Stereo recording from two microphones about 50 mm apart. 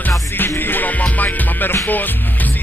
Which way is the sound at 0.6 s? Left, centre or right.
Left.